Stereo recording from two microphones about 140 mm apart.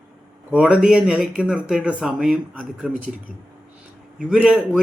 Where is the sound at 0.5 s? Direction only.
5° right (ahead or behind).